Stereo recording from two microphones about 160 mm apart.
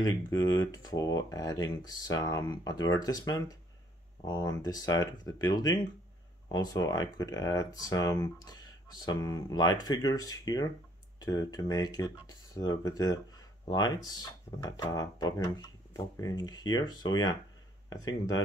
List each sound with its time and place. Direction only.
0.0 s speech: 25° left (ahead or behind)